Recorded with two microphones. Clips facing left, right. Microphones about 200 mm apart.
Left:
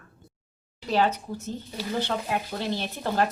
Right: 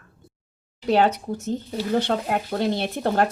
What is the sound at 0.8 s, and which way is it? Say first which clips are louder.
Speech: right 5 dB; 55° right (ahead or behind).